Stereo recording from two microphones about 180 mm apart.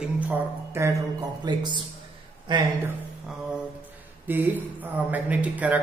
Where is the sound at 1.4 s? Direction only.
25° right (ahead or behind).